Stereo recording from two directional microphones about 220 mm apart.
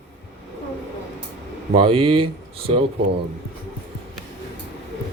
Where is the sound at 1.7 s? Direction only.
25° right (ahead or behind).